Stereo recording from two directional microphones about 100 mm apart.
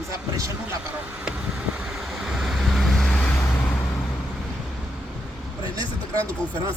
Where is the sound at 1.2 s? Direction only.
10° right (ahead or behind); by 3.3 s 5° left (ahead or behind).